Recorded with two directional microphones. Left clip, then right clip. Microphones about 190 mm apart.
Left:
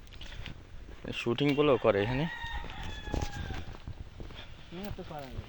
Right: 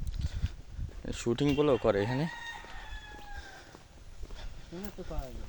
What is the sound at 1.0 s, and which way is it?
Speech, 20° right (ahead or behind).